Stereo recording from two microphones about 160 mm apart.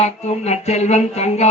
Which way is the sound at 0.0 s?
45° left (ahead or behind).